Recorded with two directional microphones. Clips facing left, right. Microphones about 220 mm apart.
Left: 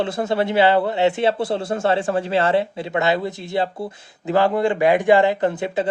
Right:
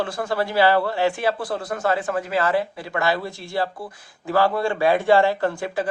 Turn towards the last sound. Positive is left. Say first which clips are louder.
# left 3 dB
turn(degrees=20)  # may be behind; listen again after turning